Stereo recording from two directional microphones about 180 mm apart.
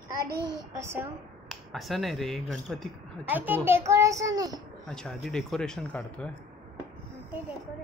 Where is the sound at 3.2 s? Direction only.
10° right (ahead or behind).